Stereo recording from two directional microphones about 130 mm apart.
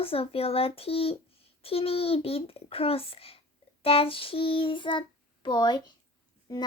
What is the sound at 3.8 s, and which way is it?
Child singing, 45° left (ahead or behind).